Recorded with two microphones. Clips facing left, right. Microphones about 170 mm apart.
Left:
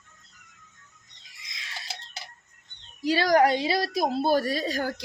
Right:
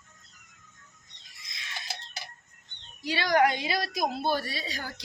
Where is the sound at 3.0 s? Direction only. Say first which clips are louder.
Left 4 dB; 40° left (ahead or behind).